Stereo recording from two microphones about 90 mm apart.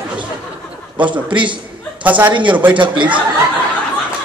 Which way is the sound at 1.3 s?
65° right (ahead or behind).